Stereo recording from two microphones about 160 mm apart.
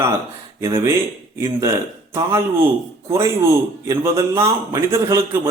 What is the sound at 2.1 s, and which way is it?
Speech, 20° right (ahead or behind).